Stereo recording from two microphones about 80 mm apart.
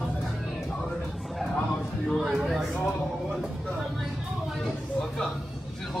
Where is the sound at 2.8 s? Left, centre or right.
Centre.